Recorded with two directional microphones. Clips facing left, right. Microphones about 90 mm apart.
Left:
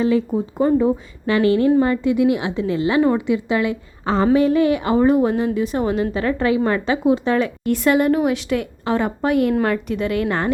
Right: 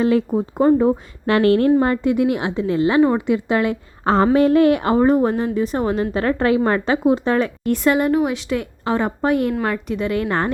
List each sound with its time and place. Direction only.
0.0 s a woman's voice: 55° right (ahead or behind)
0.5 s a woman's voice: 45° right (ahead or behind)
1.3 s a woman's voice: 55° right (ahead or behind)
4.9 s a woman's voice: 35° right (ahead or behind)